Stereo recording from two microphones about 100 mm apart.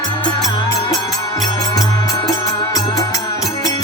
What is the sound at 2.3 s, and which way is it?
Music, 35° left (ahead or behind).